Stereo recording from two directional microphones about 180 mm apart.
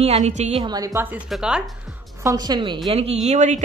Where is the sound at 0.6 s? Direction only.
20° right (ahead or behind).